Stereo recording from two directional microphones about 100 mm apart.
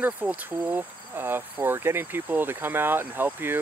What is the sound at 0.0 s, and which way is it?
Speech, 15° right (ahead or behind).